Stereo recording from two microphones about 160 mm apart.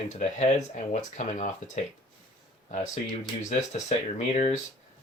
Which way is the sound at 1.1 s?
45° left (ahead or behind).